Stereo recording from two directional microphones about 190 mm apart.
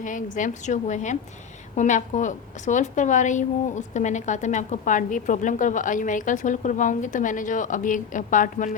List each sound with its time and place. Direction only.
0.0 s a woman's voice: 40° left (ahead or behind)